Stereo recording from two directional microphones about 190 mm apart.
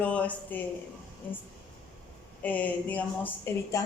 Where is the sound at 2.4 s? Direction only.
10° left (ahead or behind).